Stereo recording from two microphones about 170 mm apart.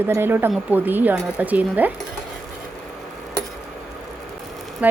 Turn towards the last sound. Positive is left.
turn(degrees=-10)  # may be behind; listen again after turning